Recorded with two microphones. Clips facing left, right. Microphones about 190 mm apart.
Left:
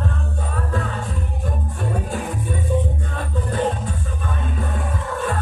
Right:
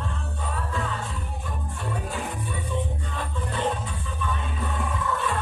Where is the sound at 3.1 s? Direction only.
45° left (ahead or behind).